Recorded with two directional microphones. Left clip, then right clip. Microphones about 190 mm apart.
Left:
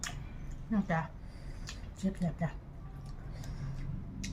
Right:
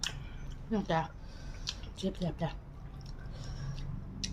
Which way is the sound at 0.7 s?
15° right (ahead or behind).